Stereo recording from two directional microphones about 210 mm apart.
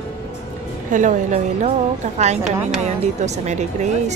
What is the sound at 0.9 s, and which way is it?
A woman's voice, 35° right (ahead or behind).